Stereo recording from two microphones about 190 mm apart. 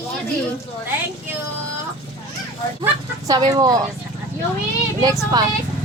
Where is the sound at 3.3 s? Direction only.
20° right (ahead or behind).